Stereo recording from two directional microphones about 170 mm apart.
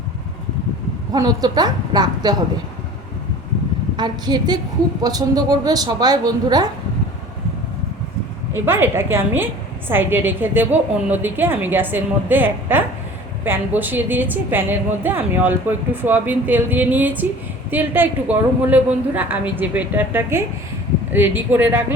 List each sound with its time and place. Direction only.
1.1 s a woman's voice: 20° right (ahead or behind)
3.9 s a woman's voice: 25° right (ahead or behind)
8.5 s a woman's voice: 15° right (ahead or behind)